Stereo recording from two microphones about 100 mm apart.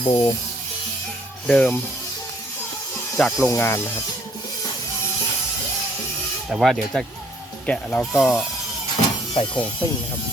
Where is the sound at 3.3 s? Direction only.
25° left (ahead or behind).